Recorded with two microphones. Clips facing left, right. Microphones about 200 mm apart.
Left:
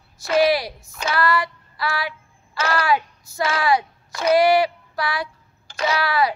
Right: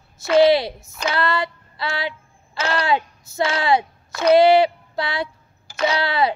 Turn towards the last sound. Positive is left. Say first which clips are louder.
# right 1 dB
turn(degrees=-25)  # may be behind; listen again after turning